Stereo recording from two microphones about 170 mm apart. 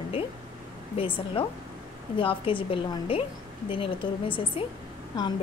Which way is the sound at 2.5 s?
30° left (ahead or behind).